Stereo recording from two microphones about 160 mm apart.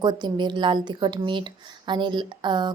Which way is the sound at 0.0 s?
25° right (ahead or behind).